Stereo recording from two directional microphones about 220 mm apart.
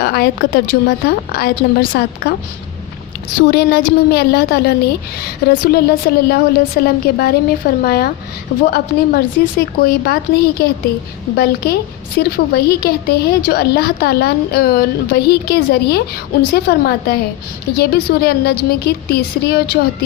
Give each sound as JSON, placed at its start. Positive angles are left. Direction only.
{"t": 0.0, "sound": "a woman's voice", "side_deg": 45}
{"t": 3.5, "sound": "a woman's voice", "side_deg": 45}